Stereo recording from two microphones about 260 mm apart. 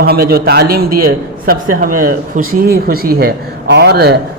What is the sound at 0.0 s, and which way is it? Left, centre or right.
A man's voice, right.